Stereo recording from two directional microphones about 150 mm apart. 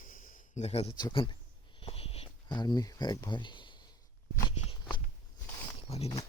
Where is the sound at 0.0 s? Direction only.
65° left (ahead or behind); by 0.9 s 45° left (ahead or behind).